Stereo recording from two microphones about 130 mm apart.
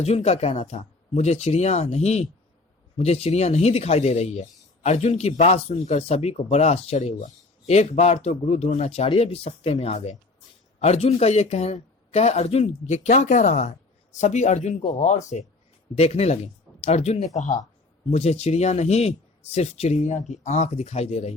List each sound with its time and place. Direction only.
0.0 s speech: 55° left (ahead or behind)
16.0 s speech: 55° left (ahead or behind)
18.1 s speech: 55° left (ahead or behind)
20.0 s speech: 65° left (ahead or behind)